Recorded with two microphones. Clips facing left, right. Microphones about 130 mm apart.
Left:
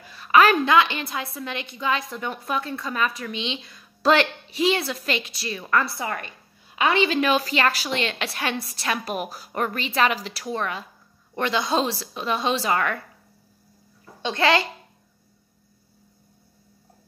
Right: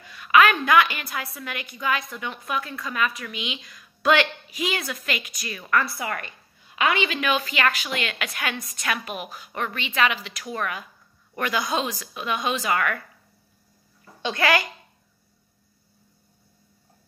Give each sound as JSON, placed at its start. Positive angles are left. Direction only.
{"t": 0.1, "sound": "a sound", "side_deg": 35}
{"t": 0.7, "sound": "a woman's voice", "side_deg": 25}
{"t": 6.0, "sound": "a woman's voice", "side_deg": 5}
{"t": 6.9, "sound": "a woman's voice", "side_deg": 35}
{"t": 14.3, "sound": "a woman's voice", "side_deg": 25}